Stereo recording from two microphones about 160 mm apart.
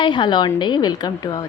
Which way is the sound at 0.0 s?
30° left (ahead or behind).